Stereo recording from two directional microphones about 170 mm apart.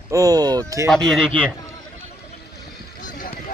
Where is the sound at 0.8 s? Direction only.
Centre (ahead or behind).